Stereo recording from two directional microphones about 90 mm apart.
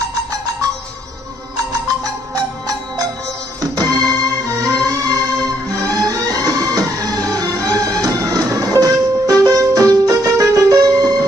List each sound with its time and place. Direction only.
0.0 s music: 40° right (ahead or behind)
3.7 s music: 45° right (ahead or behind)